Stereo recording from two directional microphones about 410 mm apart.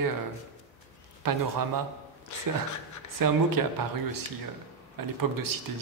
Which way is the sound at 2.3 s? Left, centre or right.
Left.